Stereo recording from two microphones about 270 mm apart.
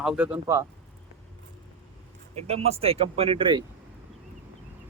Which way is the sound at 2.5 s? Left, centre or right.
Right.